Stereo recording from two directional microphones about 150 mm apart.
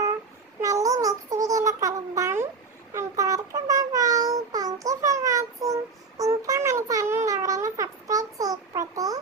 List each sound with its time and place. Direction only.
0.6 s babbling: 25° right (ahead or behind)
2.9 s child singing: 20° right (ahead or behind)
7.3 s a sound: 20° right (ahead or behind)